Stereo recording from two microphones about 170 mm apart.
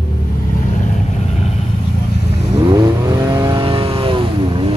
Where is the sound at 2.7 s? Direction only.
25° right (ahead or behind).